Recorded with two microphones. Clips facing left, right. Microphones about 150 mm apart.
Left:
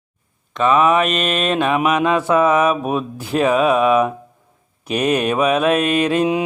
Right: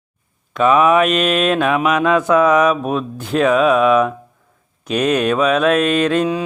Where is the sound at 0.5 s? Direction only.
Centre (ahead or behind).